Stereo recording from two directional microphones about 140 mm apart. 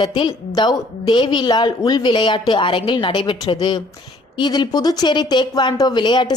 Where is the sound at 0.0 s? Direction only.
30° left (ahead or behind).